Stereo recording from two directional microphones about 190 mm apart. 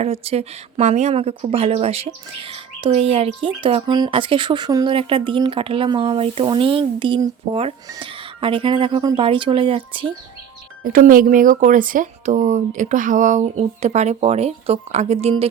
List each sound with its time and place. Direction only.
0.0 s speech: 35° right (ahead or behind)
10.8 s speech: 45° right (ahead or behind)